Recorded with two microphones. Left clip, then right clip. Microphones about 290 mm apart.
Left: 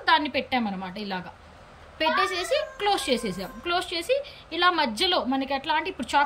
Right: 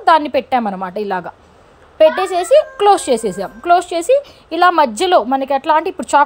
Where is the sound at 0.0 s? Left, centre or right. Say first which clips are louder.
Right 10 dB; centre.